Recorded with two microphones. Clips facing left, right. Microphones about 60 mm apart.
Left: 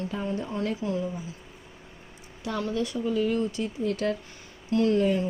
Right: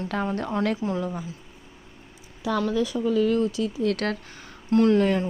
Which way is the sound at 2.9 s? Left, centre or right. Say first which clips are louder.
Right 4 dB; right.